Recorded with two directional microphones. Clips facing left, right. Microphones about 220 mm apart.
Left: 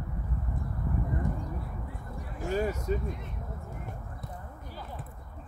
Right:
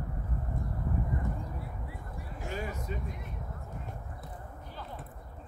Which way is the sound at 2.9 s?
40° left (ahead or behind).